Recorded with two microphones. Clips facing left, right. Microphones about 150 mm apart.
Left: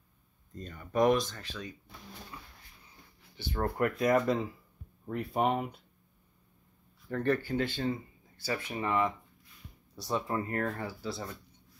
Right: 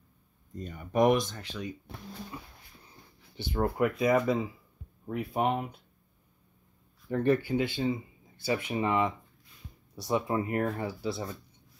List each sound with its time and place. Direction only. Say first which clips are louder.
0.6 s speech: right 2 dB; 15° right (ahead or behind)
2.3 s dog: right 5 dB; 25° right (ahead or behind)
3.3 s speech: right 3 dB; 10° right (ahead or behind)
7.1 s speech: right 4 dB; 15° right (ahead or behind)